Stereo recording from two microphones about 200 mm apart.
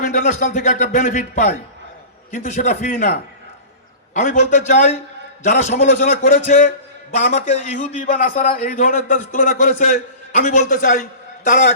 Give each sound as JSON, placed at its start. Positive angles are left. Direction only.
{"t": 0.0, "sound": "a man's voice", "side_deg": 45}